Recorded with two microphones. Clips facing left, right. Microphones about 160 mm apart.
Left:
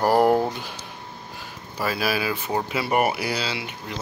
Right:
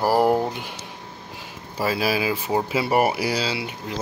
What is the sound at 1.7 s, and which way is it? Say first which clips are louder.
Speech: right 2 dB; 25° right (ahead or behind).